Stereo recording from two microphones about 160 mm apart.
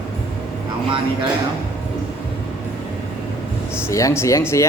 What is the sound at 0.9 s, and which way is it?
Speech, 30° right (ahead or behind).